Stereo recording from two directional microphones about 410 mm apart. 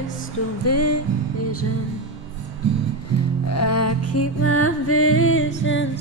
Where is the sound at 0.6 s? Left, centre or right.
Left.